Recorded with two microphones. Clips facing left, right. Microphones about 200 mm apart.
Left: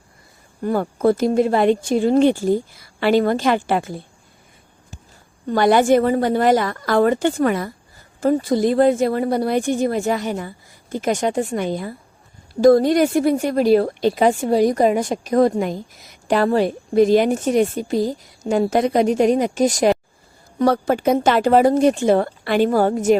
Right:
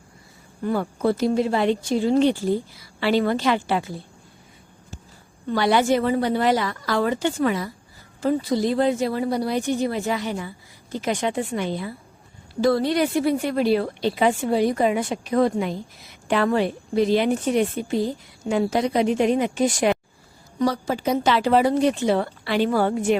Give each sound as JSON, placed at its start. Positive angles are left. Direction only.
{"t": 0.6, "sound": "speech", "side_deg": 45}
{"t": 5.5, "sound": "a woman's voice", "side_deg": 50}
{"t": 20.6, "sound": "speech", "side_deg": 55}